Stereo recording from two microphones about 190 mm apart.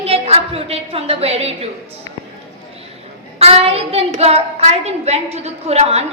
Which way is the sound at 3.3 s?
30° right (ahead or behind).